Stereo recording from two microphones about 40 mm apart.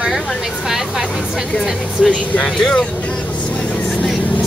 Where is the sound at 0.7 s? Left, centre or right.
Centre.